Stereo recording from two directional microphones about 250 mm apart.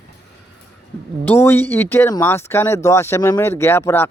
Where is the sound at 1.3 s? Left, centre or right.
Centre.